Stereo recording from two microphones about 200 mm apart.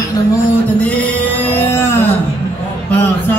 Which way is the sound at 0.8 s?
5° left (ahead or behind).